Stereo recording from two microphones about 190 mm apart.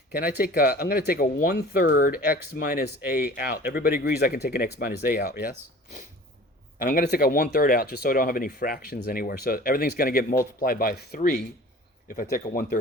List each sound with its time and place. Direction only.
0.1 s speech: 50° left (ahead or behind)
6.7 s speech: 50° left (ahead or behind)